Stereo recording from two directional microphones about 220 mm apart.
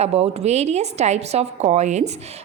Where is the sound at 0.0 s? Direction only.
30° right (ahead or behind).